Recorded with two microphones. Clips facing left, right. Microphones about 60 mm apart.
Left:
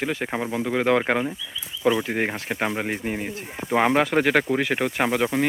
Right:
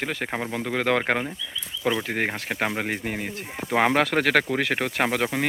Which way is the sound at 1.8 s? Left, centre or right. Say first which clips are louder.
Left 4 dB; left.